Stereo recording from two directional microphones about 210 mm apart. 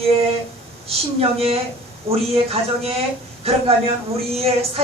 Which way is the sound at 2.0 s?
30° right (ahead or behind).